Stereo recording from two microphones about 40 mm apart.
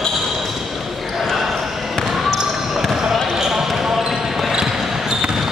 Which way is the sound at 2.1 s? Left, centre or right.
Centre.